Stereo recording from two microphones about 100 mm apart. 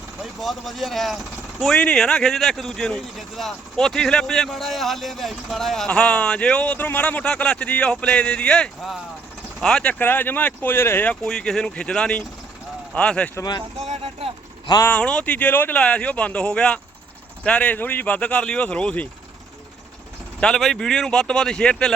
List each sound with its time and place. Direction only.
0.2 s speech: centre (ahead or behind)
10.0 s speech: 20° left (ahead or behind)
11.1 s speech: 5° left (ahead or behind)
13.7 s speech: 90° right; by 14.3 s 70° right (ahead or behind)
14.8 s speech: 10° left (ahead or behind)
20.4 s speech: 5° left (ahead or behind)